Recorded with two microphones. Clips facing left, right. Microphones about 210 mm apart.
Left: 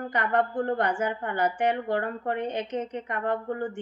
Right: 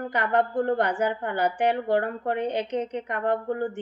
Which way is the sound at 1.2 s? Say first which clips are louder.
Even; 65° right (ahead or behind).